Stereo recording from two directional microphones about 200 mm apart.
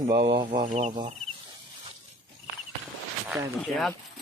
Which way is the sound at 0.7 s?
35° right (ahead or behind).